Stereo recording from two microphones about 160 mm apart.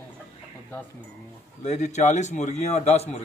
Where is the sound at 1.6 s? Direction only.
45° left (ahead or behind).